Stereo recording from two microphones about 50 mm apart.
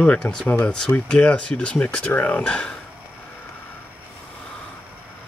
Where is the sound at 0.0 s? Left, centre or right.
Left.